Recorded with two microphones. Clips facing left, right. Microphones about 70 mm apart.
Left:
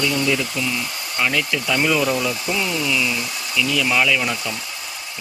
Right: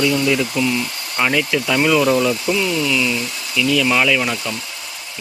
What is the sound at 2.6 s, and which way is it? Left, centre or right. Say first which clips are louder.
Speech: right 3 dB; centre.